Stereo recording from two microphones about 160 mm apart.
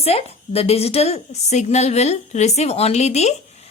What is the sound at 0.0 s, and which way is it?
A woman's voice, 40° left (ahead or behind).